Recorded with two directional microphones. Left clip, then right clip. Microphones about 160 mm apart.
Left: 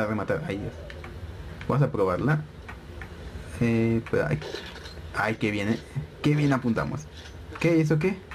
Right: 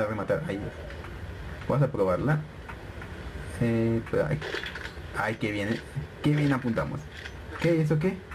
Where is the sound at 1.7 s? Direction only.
35° left (ahead or behind).